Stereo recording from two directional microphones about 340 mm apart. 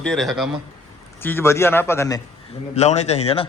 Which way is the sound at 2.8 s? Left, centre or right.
Centre.